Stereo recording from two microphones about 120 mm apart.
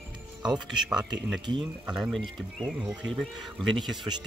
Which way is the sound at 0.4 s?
5° right (ahead or behind).